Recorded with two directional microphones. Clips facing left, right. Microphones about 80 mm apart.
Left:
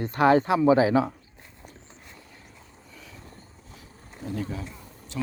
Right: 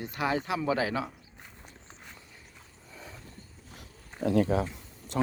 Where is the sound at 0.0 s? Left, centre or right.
Left.